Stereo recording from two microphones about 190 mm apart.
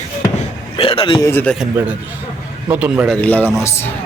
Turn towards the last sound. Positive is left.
turn(degrees=10)  # may be behind; listen again after turning